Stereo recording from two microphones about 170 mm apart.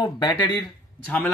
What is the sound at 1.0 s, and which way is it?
Speech, 10° left (ahead or behind).